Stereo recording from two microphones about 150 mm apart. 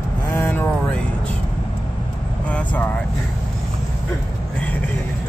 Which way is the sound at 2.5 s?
10° left (ahead or behind).